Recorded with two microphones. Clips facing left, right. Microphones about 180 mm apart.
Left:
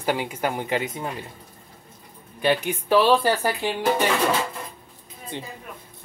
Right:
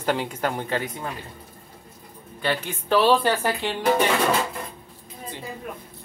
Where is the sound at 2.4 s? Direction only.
15° left (ahead or behind).